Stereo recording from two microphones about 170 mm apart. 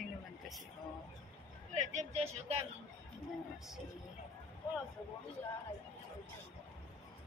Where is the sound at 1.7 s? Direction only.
45° right (ahead or behind).